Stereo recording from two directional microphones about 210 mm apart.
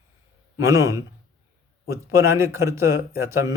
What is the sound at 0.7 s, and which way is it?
Speech, 15° right (ahead or behind).